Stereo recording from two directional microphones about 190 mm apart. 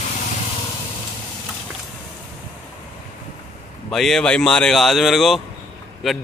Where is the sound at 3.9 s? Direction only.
Centre (ahead or behind).